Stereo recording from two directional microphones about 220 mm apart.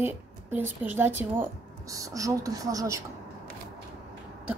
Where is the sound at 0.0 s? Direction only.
10° right (ahead or behind).